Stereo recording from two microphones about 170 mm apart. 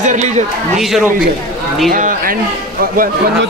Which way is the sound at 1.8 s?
55° right (ahead or behind).